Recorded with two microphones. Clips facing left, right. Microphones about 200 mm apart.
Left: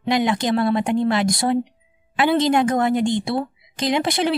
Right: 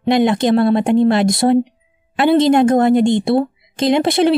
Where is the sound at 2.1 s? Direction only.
50° right (ahead or behind).